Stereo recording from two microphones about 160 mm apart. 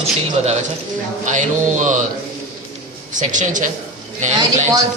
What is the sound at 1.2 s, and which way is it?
Speech, 50° right (ahead or behind).